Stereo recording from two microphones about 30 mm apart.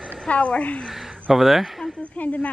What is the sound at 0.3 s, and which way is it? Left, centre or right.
Speech, left.